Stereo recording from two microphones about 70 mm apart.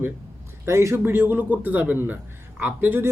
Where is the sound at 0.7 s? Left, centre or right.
Right.